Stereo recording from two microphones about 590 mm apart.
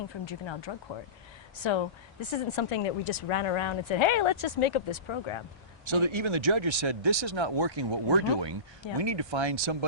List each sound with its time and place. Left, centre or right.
0.3 s speech: left
5.8 s speech: right